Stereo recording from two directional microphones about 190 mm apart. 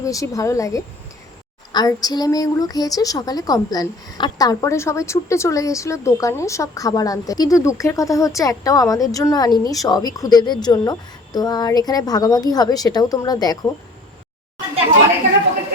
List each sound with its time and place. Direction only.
0.0 s a woman's voice: 15° left (ahead or behind)